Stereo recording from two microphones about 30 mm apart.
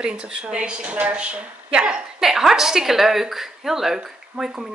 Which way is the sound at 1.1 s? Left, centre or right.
Right.